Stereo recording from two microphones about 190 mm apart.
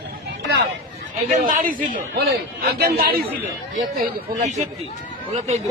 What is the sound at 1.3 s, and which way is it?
A man's voice, 40° right (ahead or behind).